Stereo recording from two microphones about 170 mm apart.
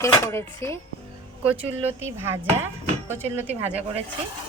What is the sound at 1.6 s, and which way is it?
Speech, 35° right (ahead or behind).